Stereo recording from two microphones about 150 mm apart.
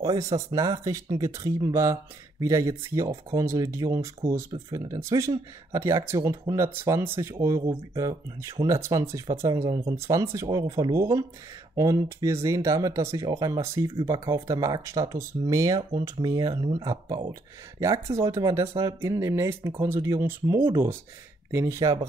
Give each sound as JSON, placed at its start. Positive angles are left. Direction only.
{"t": 0.0, "sound": "speech", "side_deg": -25}